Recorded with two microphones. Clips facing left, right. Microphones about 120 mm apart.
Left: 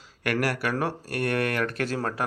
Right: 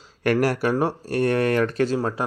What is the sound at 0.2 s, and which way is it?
Speech, 30° right (ahead or behind).